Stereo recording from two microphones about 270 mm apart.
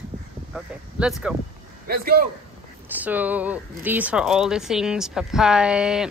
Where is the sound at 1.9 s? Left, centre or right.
Right.